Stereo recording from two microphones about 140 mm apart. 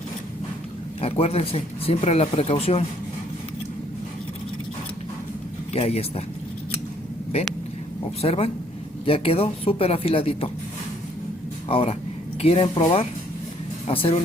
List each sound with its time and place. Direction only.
1.0 s speech: 45° left (ahead or behind)
5.7 s speech: 45° left (ahead or behind)
8.2 s speech: 45° left (ahead or behind)
11.7 s speech: 45° left (ahead or behind)